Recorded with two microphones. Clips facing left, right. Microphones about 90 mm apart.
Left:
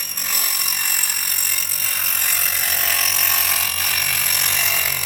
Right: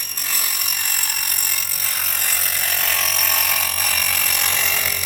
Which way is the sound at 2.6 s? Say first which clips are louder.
Right 1 dB; 10° left (ahead or behind).